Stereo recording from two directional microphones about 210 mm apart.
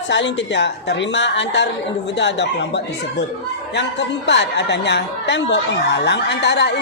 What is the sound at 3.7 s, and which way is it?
A woman's voice, 55° left (ahead or behind).